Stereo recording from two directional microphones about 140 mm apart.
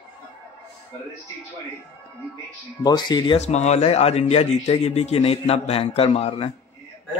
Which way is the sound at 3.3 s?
50° left (ahead or behind).